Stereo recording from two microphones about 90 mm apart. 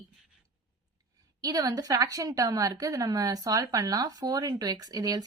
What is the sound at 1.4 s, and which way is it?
A woman's voice, 40° right (ahead or behind).